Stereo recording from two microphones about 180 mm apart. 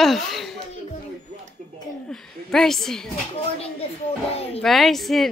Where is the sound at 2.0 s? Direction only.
Centre (ahead or behind).